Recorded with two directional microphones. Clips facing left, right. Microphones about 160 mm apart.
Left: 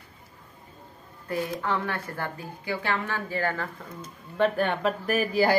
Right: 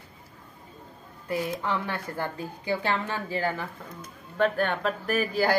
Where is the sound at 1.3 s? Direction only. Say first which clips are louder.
Even; 20° right (ahead or behind).